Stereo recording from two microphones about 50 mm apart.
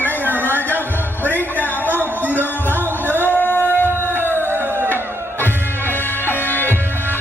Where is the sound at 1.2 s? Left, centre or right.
Left.